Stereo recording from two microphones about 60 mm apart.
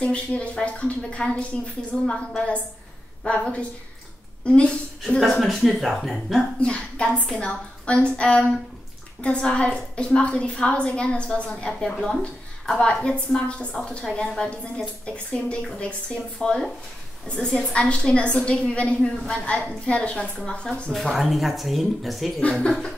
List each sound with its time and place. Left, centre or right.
0.0 s a woman's voice: centre
5.2 s speech: centre
6.6 s a woman's voice: centre
20.9 s speech: centre
22.4 s a woman's voice: centre